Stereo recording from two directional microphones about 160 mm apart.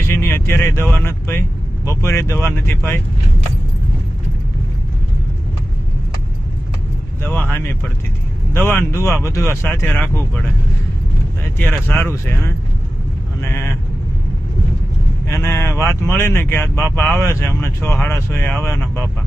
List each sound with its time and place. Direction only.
0.1 s speech: 15° left (ahead or behind)
7.2 s speech: 15° left (ahead or behind)
11.9 s speech: 15° left (ahead or behind)
15.4 s speech: 15° left (ahead or behind)